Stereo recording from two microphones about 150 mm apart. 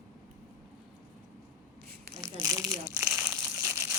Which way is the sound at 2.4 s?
25° right (ahead or behind).